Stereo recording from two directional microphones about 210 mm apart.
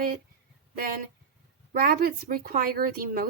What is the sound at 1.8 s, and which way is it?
Speech, 45° right (ahead or behind).